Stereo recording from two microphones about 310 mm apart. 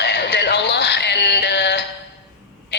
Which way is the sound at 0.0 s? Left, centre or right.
Left.